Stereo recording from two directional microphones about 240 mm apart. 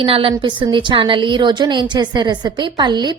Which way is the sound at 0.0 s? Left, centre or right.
Right.